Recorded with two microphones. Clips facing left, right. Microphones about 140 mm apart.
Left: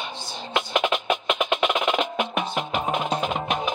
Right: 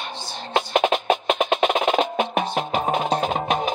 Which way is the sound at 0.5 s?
35° right (ahead or behind).